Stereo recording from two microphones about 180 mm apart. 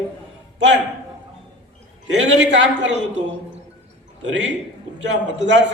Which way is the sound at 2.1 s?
80° right.